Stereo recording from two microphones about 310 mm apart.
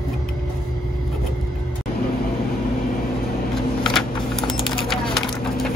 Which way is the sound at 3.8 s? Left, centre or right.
Centre.